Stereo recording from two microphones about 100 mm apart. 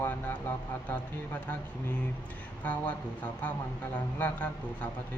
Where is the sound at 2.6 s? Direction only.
15° left (ahead or behind).